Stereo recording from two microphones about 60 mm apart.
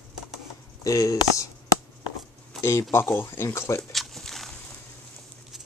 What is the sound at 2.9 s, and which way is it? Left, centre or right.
Speech, left.